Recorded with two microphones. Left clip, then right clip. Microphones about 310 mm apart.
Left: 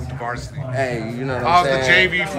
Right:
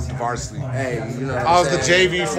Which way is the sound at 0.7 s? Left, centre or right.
Left.